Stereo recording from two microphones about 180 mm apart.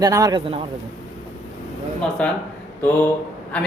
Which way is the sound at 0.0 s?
20° right (ahead or behind).